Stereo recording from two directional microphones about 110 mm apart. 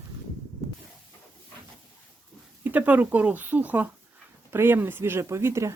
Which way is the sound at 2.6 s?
15° right (ahead or behind).